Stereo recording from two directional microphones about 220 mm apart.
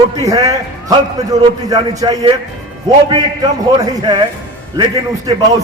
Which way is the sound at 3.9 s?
20° right (ahead or behind).